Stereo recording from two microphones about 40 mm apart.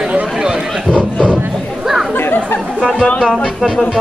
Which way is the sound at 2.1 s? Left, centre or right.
Left.